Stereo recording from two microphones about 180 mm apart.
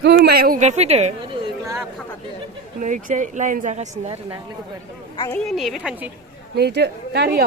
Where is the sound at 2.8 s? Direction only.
45° right (ahead or behind).